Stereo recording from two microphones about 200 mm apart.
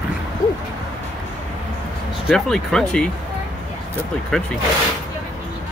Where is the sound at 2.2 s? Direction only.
Centre (ahead or behind).